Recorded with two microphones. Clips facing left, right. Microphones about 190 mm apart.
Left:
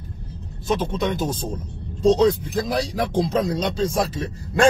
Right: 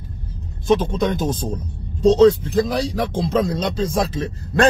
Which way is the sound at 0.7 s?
5° left (ahead or behind).